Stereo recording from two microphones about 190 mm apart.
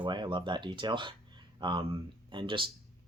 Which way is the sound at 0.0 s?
25° right (ahead or behind).